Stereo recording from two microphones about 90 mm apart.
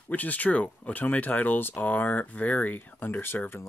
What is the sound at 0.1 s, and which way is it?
Speech, 15° left (ahead or behind).